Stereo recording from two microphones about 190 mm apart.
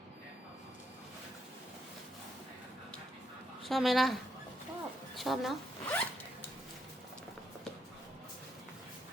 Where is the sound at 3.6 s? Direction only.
Centre (ahead or behind).